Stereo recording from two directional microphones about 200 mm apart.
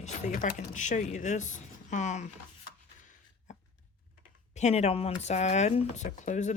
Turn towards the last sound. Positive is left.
turn(degrees=35)  # may be behind; listen again after turning